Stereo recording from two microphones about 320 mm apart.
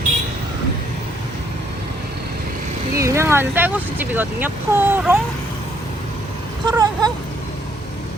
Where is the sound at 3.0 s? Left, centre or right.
Centre.